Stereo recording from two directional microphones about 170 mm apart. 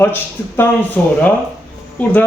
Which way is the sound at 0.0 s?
15° left (ahead or behind).